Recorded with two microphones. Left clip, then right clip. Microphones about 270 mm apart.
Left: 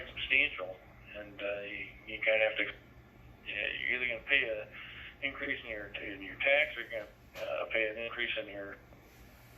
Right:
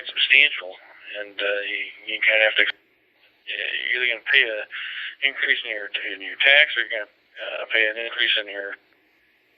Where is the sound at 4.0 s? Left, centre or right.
Centre.